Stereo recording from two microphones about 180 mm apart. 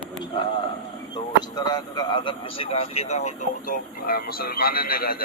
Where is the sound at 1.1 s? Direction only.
20° left (ahead or behind).